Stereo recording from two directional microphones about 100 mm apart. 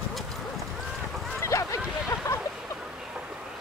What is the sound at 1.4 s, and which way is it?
Boat, 30° left (ahead or behind).